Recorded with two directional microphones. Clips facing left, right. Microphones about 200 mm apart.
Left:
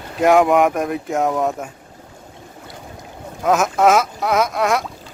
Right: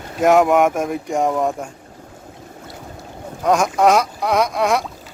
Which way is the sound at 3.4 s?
Centre (ahead or behind).